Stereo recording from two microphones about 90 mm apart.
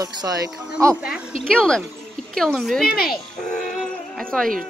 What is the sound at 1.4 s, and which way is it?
Speech, 10° left (ahead or behind).